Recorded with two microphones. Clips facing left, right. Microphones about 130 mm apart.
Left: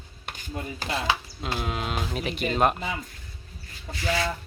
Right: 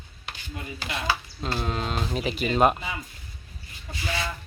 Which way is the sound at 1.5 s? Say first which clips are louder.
Right 1 dB; 5° left (ahead or behind).